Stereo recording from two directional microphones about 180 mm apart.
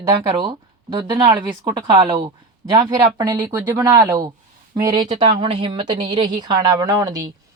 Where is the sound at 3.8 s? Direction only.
20° right (ahead or behind).